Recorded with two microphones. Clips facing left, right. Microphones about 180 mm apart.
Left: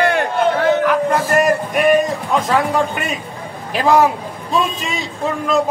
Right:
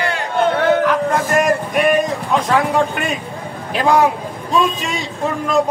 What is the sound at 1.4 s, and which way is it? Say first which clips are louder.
A man's voice: left 1 dB; centre (ahead or behind).